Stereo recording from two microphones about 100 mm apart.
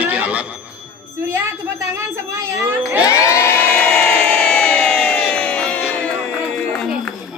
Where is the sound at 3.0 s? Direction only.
30° left (ahead or behind).